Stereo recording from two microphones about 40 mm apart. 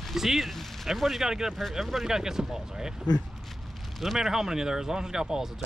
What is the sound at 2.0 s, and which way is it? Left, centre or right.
Speech, centre.